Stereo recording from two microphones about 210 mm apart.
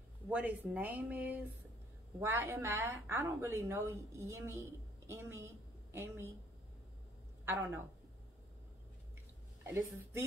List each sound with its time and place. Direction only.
0.3 s a woman's voice: 10° right (ahead or behind)
9.6 s a woman's voice: 10° right (ahead or behind)